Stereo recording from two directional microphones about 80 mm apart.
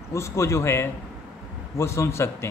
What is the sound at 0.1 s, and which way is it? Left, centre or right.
Speech, left.